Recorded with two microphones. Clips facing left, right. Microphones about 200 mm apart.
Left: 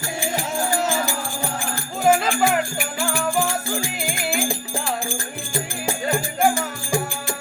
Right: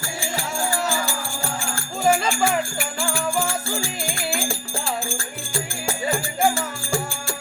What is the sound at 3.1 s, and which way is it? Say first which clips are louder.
Music: left 2 dB; 20° left (ahead or behind).